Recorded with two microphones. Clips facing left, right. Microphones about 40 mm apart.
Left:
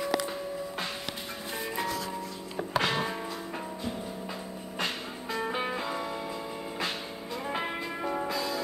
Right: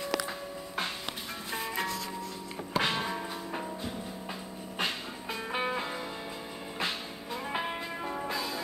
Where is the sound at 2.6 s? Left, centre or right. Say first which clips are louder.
Left 9 dB; left.